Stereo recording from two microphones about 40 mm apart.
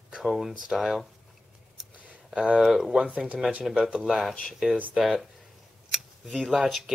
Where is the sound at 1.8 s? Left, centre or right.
Centre.